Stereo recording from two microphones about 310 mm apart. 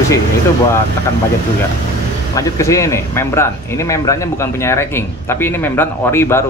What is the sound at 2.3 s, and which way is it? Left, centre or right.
Speech, centre.